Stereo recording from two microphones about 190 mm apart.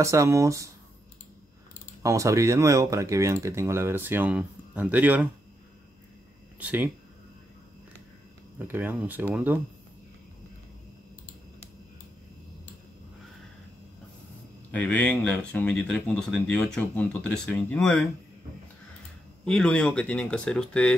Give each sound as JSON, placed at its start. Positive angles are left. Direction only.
{"t": 0.0, "sound": "speech", "side_deg": -15}
{"t": 2.0, "sound": "speech", "side_deg": -15}
{"t": 6.6, "sound": "speech", "side_deg": -10}
{"t": 8.5, "sound": "speech", "side_deg": -10}
{"t": 14.7, "sound": "speech", "side_deg": 5}
{"t": 19.4, "sound": "speech", "side_deg": 5}